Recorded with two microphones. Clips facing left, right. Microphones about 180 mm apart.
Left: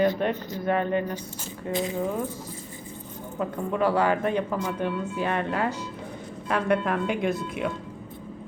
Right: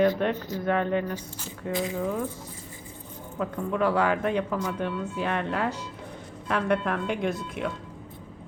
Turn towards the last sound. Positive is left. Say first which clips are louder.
# left 2 dB
turn(degrees=5)  # may be behind; listen again after turning